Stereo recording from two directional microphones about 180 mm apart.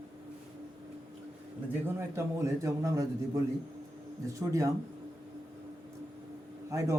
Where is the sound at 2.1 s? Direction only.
15° right (ahead or behind).